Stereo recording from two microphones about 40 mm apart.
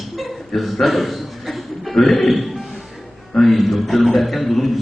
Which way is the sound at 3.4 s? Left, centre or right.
Centre.